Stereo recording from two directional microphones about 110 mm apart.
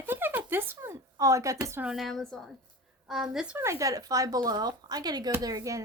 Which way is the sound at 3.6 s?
25° right (ahead or behind).